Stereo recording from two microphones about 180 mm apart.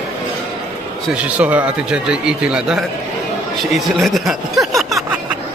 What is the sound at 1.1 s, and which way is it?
A man's voice, 5° right (ahead or behind).